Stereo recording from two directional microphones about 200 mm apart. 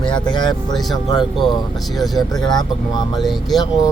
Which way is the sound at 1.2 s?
Centre (ahead or behind).